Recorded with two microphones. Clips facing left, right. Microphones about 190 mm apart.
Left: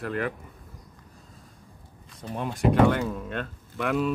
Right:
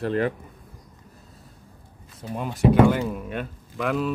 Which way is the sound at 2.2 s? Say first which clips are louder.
Right 3 dB; 5° right (ahead or behind).